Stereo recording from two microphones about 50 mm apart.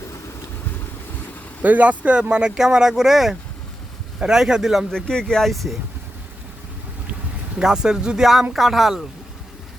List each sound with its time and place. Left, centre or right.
1.6 s speech: right; by 4.9 s centre
4.9 s speech: centre
5.5 s speech: centre
7.6 s speech: centre